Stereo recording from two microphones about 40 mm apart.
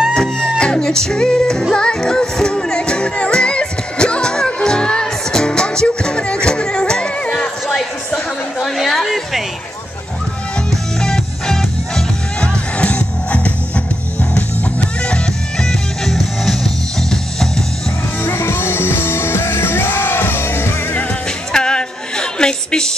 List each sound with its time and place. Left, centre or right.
0.1 s music: left
7.7 s a sound: left
8.8 s a sound: centre
11.0 s music: centre
12.7 s music: left
15.0 s music: left
15.6 s music: centre
18.2 s music: left
21.5 s music: centre